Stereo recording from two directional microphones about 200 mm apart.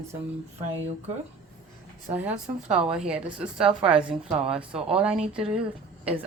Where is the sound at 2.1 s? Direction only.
5° right (ahead or behind).